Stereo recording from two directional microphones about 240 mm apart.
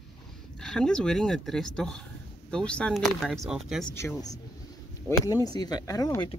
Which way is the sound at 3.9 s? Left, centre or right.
Centre.